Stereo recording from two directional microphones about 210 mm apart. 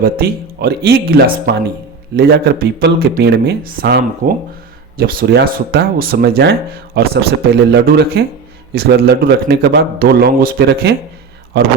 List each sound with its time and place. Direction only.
0.0 s speech: 45° right (ahead or behind)